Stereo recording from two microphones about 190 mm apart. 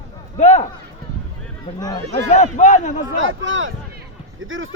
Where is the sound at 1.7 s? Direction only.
20° left (ahead or behind).